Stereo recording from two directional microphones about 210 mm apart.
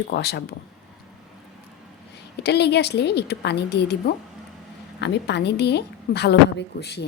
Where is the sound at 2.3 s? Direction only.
50° left (ahead or behind).